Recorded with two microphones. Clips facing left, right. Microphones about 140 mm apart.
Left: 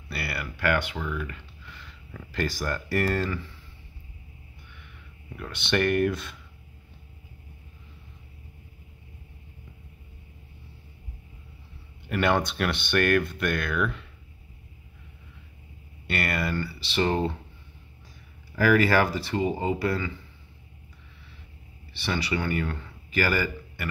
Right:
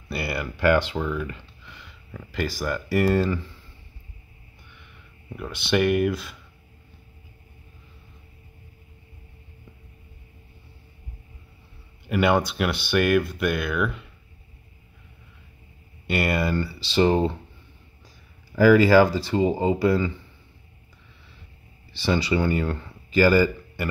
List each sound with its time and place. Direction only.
0.1 s speech: 20° right (ahead or behind)
2.1 s speech: 5° right (ahead or behind)
5.3 s speech: 10° right (ahead or behind)
12.1 s speech: 10° right (ahead or behind)
16.1 s speech: 20° right (ahead or behind)
18.6 s speech: 20° right (ahead or behind)
22.0 s speech: 25° right (ahead or behind)